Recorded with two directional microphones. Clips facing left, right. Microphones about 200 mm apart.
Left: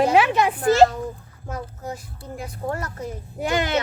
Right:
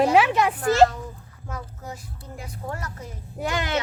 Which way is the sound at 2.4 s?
50° left (ahead or behind).